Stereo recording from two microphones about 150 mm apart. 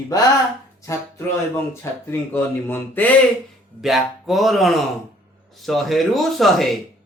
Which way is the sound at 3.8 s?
Centre (ahead or behind).